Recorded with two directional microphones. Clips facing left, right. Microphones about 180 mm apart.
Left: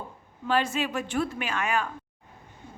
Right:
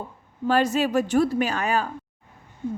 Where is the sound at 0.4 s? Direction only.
40° right (ahead or behind).